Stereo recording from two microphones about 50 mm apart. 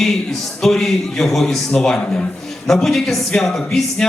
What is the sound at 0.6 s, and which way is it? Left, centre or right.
Speech, centre.